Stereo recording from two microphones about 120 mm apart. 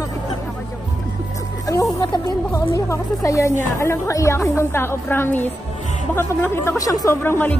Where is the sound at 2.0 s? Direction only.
25° left (ahead or behind).